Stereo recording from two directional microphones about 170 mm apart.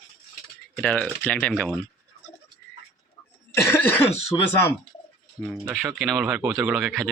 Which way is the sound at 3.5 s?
10° left (ahead or behind).